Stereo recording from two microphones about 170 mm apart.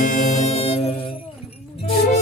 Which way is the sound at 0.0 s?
45° left (ahead or behind).